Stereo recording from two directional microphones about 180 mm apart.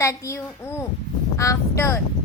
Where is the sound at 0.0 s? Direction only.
15° left (ahead or behind).